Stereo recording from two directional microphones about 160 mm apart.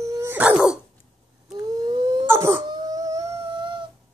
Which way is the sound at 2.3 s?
15° right (ahead or behind).